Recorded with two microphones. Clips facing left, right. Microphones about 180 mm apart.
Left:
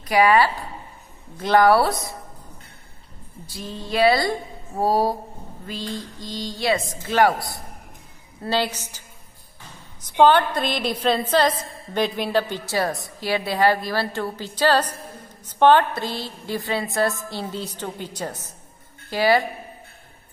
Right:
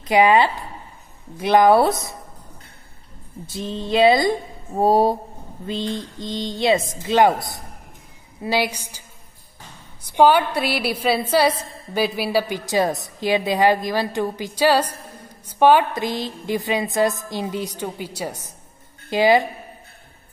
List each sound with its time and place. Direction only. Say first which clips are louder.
0.0 s speech: right 2 dB; 20° right (ahead or behind)
3.4 s a woman's voice: right 6 dB; 20° right (ahead or behind)
10.0 s a woman's voice: right 1 dB; 10° right (ahead or behind)